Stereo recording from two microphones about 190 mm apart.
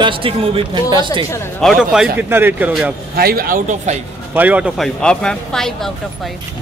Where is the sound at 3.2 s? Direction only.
50° right (ahead or behind).